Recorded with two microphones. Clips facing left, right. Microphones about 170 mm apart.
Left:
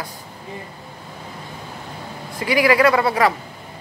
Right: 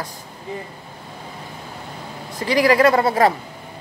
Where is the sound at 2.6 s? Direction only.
45° right (ahead or behind).